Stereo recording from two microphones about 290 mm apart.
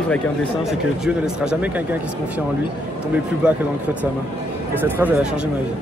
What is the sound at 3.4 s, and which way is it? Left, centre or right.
Speech, centre.